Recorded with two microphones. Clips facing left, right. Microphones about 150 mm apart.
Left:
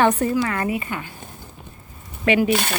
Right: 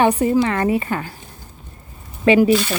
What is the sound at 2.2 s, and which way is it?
Speech, 30° right (ahead or behind).